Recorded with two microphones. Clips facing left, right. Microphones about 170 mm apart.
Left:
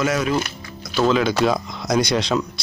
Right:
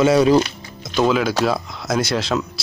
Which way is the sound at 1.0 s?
5° right (ahead or behind).